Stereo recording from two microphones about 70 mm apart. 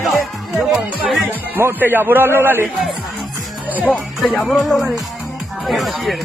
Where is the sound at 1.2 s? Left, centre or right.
Right.